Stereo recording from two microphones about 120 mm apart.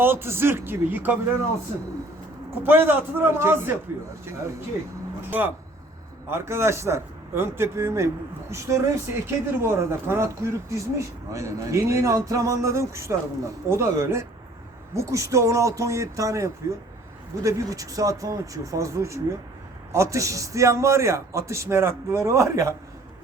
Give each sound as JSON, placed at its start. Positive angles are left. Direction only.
{"t": 0.0, "sound": "speech", "side_deg": -20}
{"t": 2.6, "sound": "speech", "side_deg": -15}
{"t": 5.3, "sound": "a man's voice", "side_deg": -15}